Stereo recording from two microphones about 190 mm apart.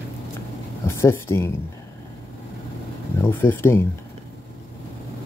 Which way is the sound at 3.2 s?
10° left (ahead or behind).